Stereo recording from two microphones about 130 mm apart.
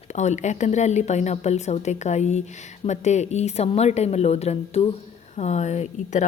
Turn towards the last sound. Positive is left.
turn(degrees=60)  # may be behind; listen again after turning